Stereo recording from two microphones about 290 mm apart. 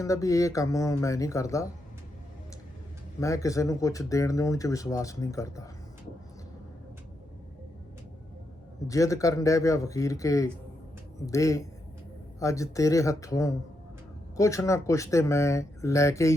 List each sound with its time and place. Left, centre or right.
0.0 s speech: centre
3.2 s speech: centre
8.9 s speech: centre